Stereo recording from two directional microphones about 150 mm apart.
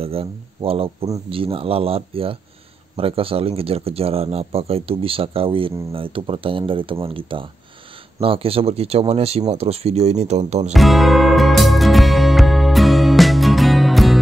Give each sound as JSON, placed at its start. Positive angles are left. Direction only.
{"t": 0.0, "sound": "speech", "side_deg": -40}
{"t": 10.7, "sound": "music", "side_deg": 0}